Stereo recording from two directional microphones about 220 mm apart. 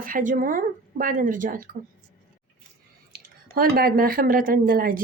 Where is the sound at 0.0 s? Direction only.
40° right (ahead or behind).